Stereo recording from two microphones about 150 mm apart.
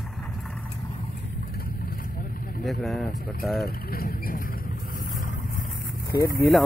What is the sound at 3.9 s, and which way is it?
Speech, 75° left (ahead or behind).